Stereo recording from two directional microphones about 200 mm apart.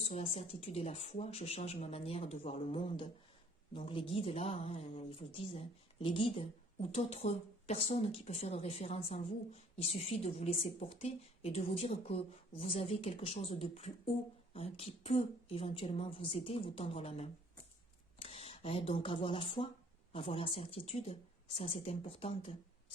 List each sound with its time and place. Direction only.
0.1 s speech: 30° left (ahead or behind)